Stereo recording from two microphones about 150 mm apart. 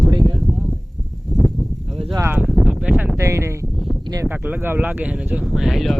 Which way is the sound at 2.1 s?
15° right (ahead or behind).